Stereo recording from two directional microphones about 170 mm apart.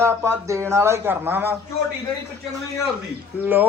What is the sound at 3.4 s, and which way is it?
Speech, 10° right (ahead or behind).